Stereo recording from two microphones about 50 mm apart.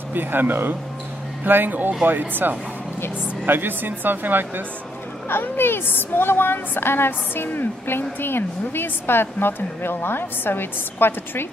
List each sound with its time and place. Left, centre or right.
0.1 s speech: right
5.3 s speech: left